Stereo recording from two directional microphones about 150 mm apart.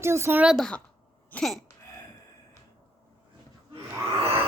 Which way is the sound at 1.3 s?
Centre (ahead or behind).